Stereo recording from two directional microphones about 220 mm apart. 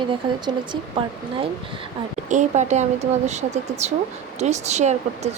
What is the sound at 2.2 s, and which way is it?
Speech, 35° right (ahead or behind).